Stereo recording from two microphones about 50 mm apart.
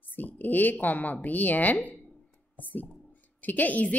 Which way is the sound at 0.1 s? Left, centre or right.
Left.